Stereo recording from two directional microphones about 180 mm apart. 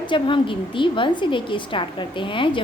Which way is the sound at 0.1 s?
30° left (ahead or behind).